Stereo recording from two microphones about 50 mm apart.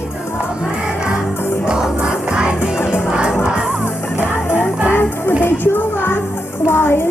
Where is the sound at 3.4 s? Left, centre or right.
Centre.